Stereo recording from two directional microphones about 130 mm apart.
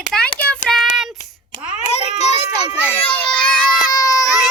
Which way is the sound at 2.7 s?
10° right (ahead or behind).